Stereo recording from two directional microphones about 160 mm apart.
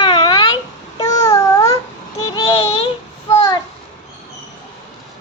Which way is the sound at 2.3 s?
35° left (ahead or behind).